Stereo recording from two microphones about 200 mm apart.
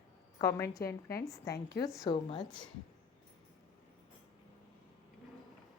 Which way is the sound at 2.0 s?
20° left (ahead or behind).